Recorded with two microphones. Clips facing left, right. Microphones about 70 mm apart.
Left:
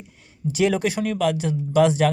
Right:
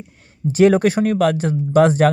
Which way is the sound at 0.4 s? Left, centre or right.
Right.